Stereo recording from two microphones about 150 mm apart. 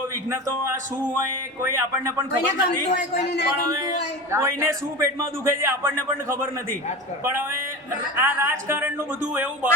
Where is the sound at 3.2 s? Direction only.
90° left.